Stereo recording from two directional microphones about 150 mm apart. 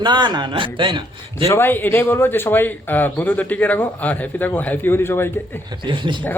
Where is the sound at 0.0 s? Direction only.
30° right (ahead or behind).